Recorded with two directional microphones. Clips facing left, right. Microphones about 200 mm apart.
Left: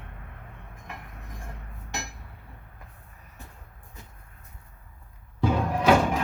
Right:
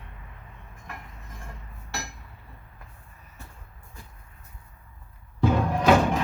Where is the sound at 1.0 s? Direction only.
60° left (ahead or behind).